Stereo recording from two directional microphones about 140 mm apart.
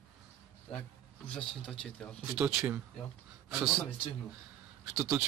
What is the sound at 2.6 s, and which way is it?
Speech, 15° right (ahead or behind).